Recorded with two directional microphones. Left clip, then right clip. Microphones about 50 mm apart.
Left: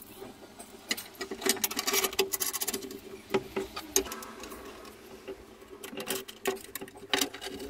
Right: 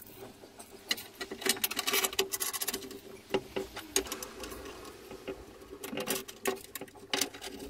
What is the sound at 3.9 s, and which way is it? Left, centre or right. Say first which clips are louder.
Sewing machine: left 2 dB; centre.